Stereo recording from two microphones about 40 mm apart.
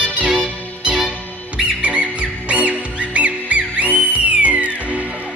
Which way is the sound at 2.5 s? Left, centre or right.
Right.